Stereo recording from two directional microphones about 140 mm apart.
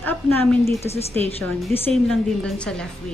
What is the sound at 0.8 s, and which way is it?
Speech, 50° left (ahead or behind).